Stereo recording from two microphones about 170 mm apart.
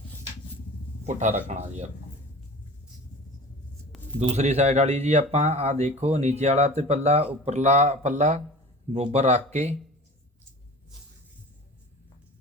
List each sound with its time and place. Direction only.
1.4 s speech: 40° right (ahead or behind)
4.2 s speech: 40° right (ahead or behind)